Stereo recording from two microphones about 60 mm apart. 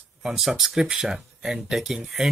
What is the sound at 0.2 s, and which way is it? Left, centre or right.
Speech, centre.